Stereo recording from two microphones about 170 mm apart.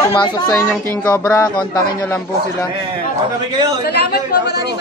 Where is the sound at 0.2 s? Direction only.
20° left (ahead or behind).